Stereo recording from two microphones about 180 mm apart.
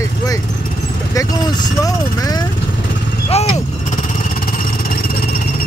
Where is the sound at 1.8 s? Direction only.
20° left (ahead or behind).